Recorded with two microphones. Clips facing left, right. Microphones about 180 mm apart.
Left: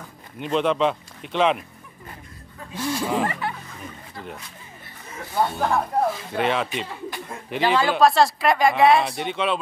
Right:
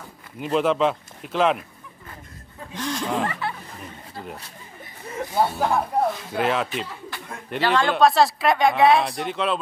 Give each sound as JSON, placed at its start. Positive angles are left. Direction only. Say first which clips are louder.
{"t": 0.4, "sound": "speech", "louder": "right 1 dB", "side_deg": -5}
{"t": 2.7, "sound": "speech", "louder": "left 2 dB", "side_deg": 10}
{"t": 5.3, "sound": "speech", "louder": "even", "side_deg": -10}